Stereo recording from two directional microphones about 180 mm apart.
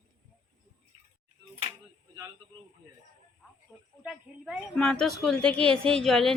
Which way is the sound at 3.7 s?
5° right (ahead or behind).